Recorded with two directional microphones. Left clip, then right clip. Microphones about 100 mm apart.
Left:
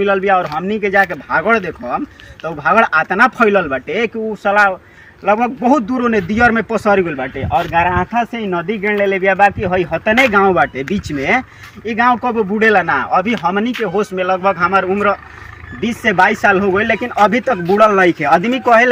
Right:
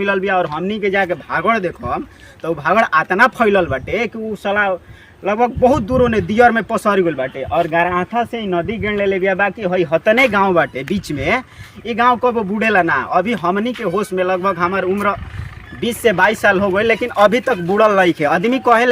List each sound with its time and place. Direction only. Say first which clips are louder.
0.0 s a man's voice: left 3 dB; 30° right (ahead or behind)
12.5 s a man's voice: left 5 dB; 15° right (ahead or behind)
15.8 s a man's voice: left 1 dB; 30° right (ahead or behind)